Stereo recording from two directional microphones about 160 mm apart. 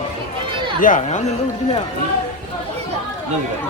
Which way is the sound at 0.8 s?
50° left (ahead or behind).